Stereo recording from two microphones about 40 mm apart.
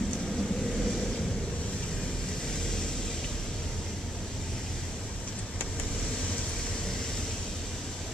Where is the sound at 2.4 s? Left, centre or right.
Centre.